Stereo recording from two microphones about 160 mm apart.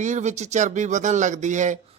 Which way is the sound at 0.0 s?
50° right (ahead or behind).